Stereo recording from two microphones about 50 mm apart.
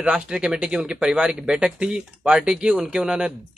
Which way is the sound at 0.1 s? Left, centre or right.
Centre.